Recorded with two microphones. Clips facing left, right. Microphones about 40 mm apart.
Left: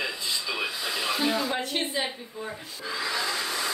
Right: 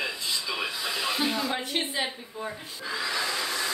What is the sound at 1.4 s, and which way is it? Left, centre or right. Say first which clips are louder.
A woman's voice: left 1 dB; centre.